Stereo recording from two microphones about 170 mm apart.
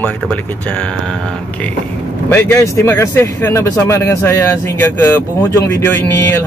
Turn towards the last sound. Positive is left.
turn(degrees=15)  # may be behind; listen again after turning